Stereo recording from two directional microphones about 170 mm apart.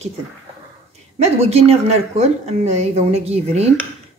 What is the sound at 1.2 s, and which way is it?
A woman's voice, 35° right (ahead or behind).